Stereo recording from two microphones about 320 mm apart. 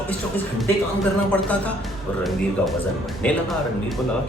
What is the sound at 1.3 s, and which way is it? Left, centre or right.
Speech, centre.